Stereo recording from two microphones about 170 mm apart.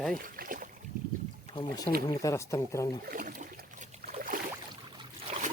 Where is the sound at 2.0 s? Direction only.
20° left (ahead or behind).